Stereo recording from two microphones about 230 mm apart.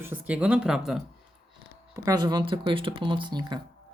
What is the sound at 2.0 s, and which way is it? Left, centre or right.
Speech, centre.